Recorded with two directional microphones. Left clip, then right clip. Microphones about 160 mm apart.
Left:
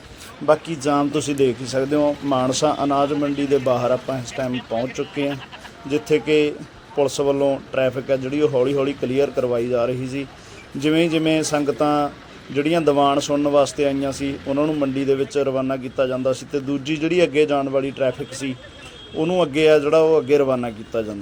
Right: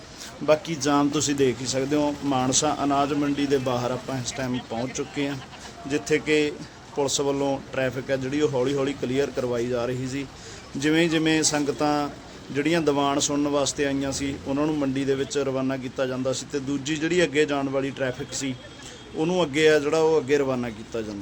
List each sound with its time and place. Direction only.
0.4 s speech: 10° left (ahead or behind)